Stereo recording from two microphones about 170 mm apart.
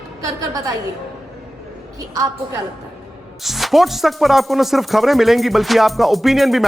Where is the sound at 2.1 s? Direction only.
20° right (ahead or behind).